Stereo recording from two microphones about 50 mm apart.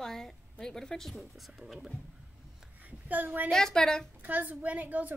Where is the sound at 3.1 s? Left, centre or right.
Right.